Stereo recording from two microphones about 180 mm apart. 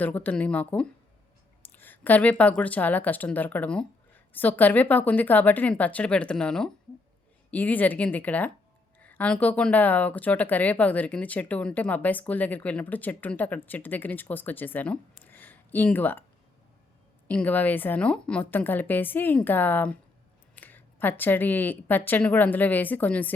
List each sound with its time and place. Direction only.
0.0 s speech: 10° left (ahead or behind)
15.2 s a sound: 10° left (ahead or behind)
17.2 s speech: 10° left (ahead or behind)